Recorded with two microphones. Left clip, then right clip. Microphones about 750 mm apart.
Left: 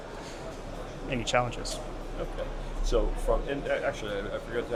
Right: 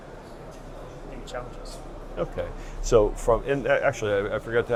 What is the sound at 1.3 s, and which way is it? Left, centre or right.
Speech, left.